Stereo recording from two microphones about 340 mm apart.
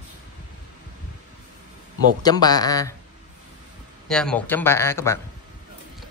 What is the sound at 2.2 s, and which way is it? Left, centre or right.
Speech, centre.